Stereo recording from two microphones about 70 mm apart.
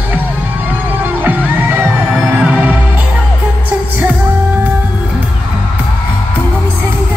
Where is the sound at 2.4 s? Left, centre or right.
Centre.